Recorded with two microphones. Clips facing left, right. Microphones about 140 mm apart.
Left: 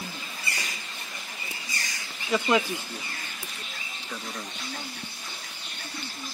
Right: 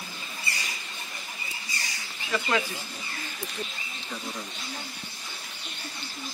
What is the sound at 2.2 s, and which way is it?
Speech, 15° left (ahead or behind).